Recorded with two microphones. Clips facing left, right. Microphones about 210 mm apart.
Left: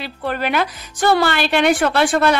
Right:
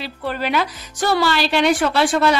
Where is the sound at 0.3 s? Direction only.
55° left (ahead or behind).